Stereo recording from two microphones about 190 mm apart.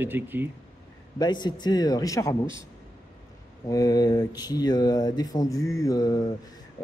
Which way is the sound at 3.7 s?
20° left (ahead or behind).